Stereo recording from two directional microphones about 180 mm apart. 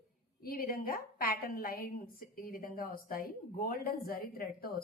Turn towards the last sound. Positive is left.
turn(degrees=55)  # may be behind; listen again after turning